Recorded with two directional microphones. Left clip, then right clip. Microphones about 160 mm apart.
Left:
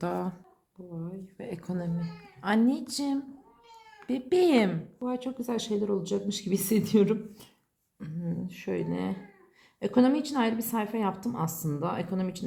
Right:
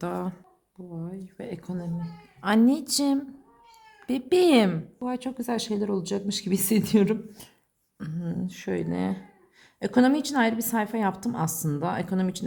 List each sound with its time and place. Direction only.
0.0 s speech: 10° right (ahead or behind)
0.9 s a woman's voice: 50° right (ahead or behind)
1.4 s a woman's voice: 25° right (ahead or behind)
1.6 s speech: 15° right (ahead or behind)
2.4 s a woman's voice: 40° right (ahead or behind)
5.0 s a woman's voice: 55° right (ahead or behind)